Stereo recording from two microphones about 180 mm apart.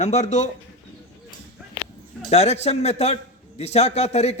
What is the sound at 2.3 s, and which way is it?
A man's voice, 35° left (ahead or behind).